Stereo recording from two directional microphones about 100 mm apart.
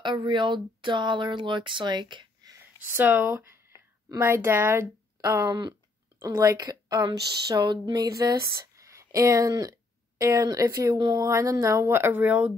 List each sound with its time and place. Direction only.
0.0 s speech: 50° right (ahead or behind)
2.9 s speech: 20° right (ahead or behind)
3.7 s a sound: 45° left (ahead or behind)
4.2 s speech: 25° right (ahead or behind)
5.2 s speech: 35° right (ahead or behind)
11.2 s speech: 35° right (ahead or behind); by 12.5 s 15° right (ahead or behind)